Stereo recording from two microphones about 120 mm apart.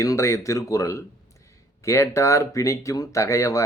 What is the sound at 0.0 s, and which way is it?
Speech, 25° left (ahead or behind).